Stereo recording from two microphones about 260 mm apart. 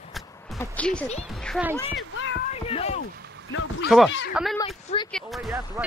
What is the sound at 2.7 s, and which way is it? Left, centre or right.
Rowboat, left.